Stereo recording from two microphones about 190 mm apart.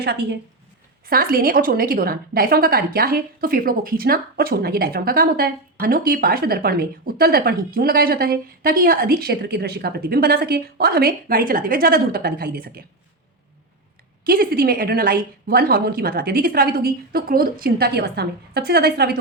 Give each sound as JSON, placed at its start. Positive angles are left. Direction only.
{"t": 0.0, "sound": "a woman's voice", "side_deg": -60}
{"t": 14.3, "sound": "a woman's voice", "side_deg": -55}